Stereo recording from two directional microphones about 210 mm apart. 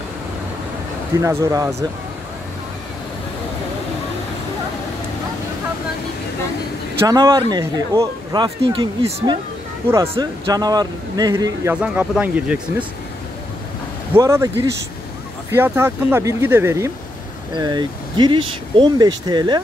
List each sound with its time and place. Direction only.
1.2 s speech: 15° right (ahead or behind)
7.1 s speech: 20° right (ahead or behind)
14.1 s speech: 15° right (ahead or behind)